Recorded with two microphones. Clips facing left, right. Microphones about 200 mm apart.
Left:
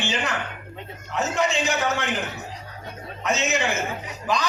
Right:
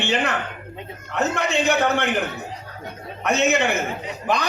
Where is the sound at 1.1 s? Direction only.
60° right (ahead or behind).